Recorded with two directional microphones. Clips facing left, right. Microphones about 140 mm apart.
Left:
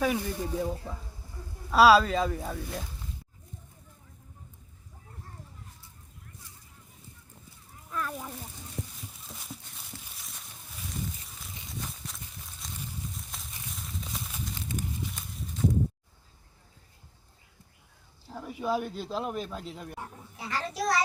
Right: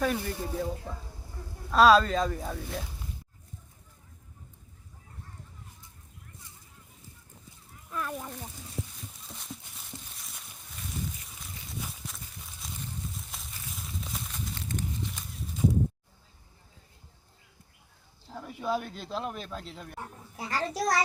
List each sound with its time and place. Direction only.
0.0 s speech: 5° left (ahead or behind)
7.9 s a sound: 5° right (ahead or behind)
18.3 s speech: 5° left (ahead or behind)
20.3 s a child's voice: 40° right (ahead or behind)